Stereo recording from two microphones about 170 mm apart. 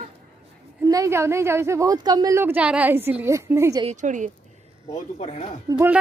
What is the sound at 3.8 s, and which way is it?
Speech, 45° right (ahead or behind).